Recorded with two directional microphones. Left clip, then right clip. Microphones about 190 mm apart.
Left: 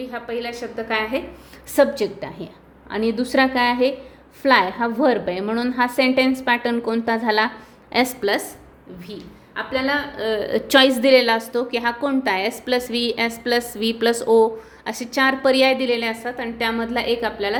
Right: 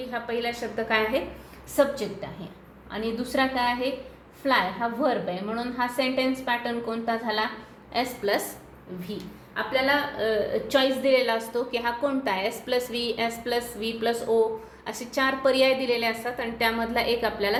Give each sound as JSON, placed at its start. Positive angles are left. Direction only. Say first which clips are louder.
{"t": 0.0, "sound": "a woman's voice", "louder": "left 2 dB", "side_deg": 25}
{"t": 1.7, "sound": "a woman's voice", "louder": "left 6 dB", "side_deg": 65}
{"t": 8.2, "sound": "a woman's voice", "louder": "left 4 dB", "side_deg": 40}
{"t": 9.6, "sound": "a woman's voice", "louder": "left 2 dB", "side_deg": 25}
{"t": 10.5, "sound": "a woman's voice", "louder": "left 8 dB", "side_deg": 65}
{"t": 14.8, "sound": "a woman's voice", "louder": "left 6 dB", "side_deg": 45}